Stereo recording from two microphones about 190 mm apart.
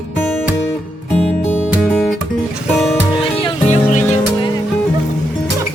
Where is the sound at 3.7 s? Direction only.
40° left (ahead or behind).